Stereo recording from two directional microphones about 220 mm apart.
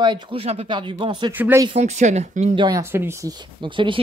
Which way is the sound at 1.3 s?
10° right (ahead or behind).